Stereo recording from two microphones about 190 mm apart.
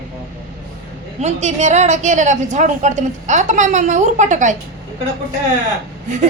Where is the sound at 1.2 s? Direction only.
40° right (ahead or behind).